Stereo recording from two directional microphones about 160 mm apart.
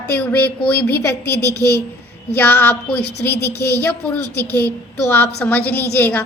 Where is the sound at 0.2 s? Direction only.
10° left (ahead or behind).